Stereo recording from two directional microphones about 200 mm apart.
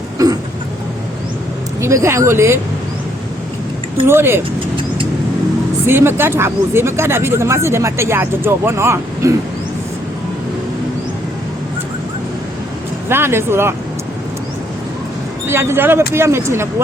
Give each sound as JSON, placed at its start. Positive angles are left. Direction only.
{"t": 0.2, "sound": "vehicle", "side_deg": -15}
{"t": 1.8, "sound": "speech", "side_deg": -15}
{"t": 4.0, "sound": "speech", "side_deg": -10}
{"t": 5.8, "sound": "speech", "side_deg": -10}
{"t": 13.1, "sound": "speech", "side_deg": -10}
{"t": 15.4, "sound": "speech", "side_deg": -10}